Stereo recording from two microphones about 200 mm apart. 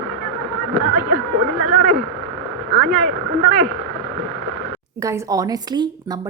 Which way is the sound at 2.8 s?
Centre (ahead or behind).